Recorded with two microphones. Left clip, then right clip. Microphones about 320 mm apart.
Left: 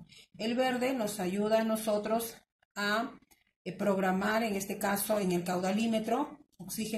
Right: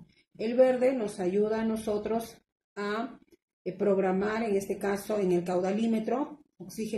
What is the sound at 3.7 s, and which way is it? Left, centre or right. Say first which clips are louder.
A woman's voice: right 3 dB; left.